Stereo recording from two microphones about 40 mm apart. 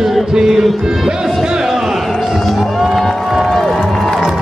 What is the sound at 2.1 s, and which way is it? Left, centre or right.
Music, centre.